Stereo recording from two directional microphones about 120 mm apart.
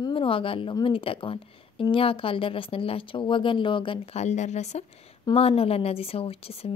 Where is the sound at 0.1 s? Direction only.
45° left (ahead or behind); by 5.1 s 65° left (ahead or behind).